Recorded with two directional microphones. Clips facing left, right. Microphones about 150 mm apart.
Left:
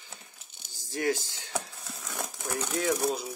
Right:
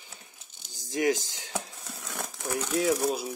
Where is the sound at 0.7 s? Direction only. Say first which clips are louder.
Right 3 dB; 15° right (ahead or behind).